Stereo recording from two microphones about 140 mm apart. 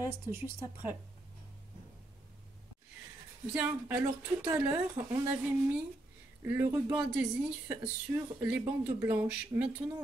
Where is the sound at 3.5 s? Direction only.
15° right (ahead or behind).